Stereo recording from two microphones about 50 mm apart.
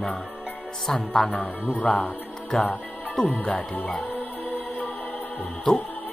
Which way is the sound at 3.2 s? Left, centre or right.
Centre.